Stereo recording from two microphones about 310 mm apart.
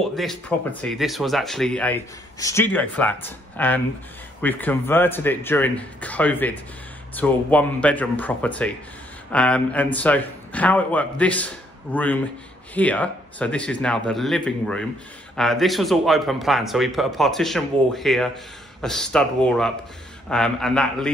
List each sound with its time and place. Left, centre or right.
0.0 s speech: centre